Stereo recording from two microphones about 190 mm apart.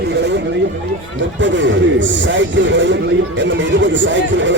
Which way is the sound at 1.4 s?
75° right (ahead or behind).